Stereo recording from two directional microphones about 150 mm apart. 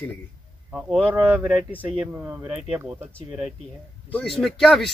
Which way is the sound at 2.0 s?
10° right (ahead or behind).